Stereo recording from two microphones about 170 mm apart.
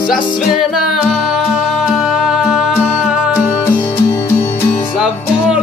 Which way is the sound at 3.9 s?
15° left (ahead or behind).